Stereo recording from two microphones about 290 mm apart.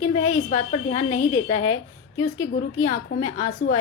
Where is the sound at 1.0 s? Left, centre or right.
Left.